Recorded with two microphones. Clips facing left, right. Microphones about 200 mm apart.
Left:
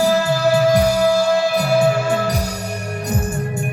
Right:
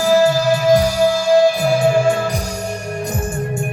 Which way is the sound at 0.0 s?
60° left (ahead or behind).